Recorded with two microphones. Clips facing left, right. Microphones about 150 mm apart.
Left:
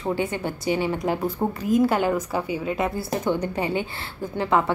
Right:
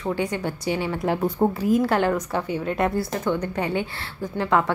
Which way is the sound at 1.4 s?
15° right (ahead or behind).